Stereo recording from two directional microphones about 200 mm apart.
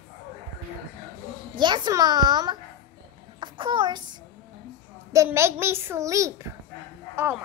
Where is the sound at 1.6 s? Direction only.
20° right (ahead or behind).